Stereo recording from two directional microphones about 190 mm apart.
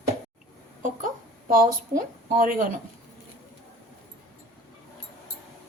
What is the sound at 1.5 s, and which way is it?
Speech, 45° right (ahead or behind).